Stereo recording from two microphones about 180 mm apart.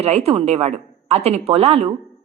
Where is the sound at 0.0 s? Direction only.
35° right (ahead or behind).